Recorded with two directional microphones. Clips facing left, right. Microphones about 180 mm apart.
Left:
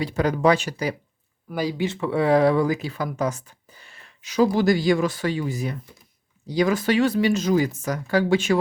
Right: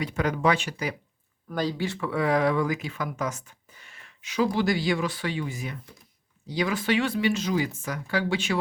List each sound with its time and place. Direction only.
0.0 s speech: 35° left (ahead or behind)
1.5 s speech: 10° left (ahead or behind)
1.9 s speech: 25° left (ahead or behind); by 8.5 s 45° left (ahead or behind)